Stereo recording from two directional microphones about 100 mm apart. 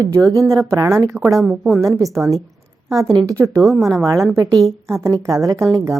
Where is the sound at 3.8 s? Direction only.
Centre (ahead or behind).